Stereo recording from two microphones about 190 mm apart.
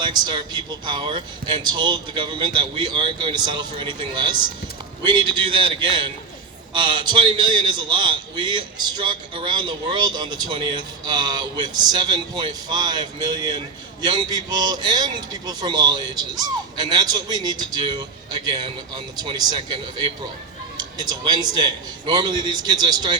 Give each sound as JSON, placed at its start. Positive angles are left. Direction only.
{"t": 0.0, "sound": "speech", "side_deg": -25}
{"t": 18.9, "sound": "speech", "side_deg": -25}
{"t": 20.7, "sound": "speech", "side_deg": -20}